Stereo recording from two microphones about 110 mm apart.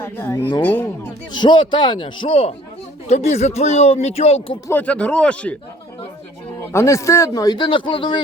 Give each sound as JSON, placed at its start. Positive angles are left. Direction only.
{"t": 0.0, "sound": "speech", "side_deg": 25}
{"t": 1.3, "sound": "a man's voice", "side_deg": 45}
{"t": 3.1, "sound": "speech", "side_deg": 80}
{"t": 4.7, "sound": "speech", "side_deg": 15}
{"t": 6.7, "sound": "speech", "side_deg": 25}